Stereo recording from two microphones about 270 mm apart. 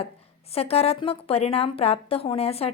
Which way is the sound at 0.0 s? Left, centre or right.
Left.